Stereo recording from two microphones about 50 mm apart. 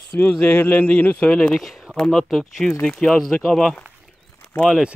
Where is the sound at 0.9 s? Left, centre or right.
Left.